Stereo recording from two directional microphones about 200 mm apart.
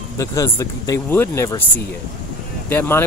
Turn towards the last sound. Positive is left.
turn(degrees=10)  # may be behind; listen again after turning